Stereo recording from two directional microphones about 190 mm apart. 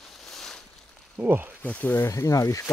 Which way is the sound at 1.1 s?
10° right (ahead or behind).